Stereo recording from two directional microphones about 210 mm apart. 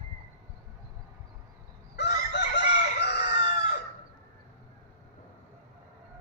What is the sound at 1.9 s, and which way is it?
Chicken, 55° left (ahead or behind).